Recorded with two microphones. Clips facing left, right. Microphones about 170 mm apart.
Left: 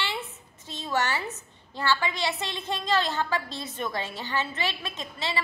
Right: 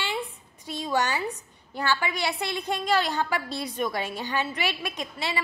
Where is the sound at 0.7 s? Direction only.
15° right (ahead or behind).